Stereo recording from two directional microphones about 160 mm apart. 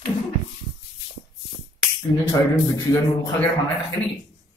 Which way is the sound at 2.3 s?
20° left (ahead or behind).